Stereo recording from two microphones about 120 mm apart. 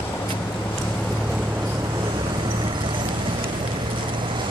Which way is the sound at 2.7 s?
45° right (ahead or behind).